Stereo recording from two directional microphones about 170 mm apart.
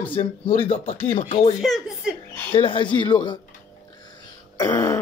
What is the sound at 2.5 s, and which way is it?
Speech, 30° left (ahead or behind).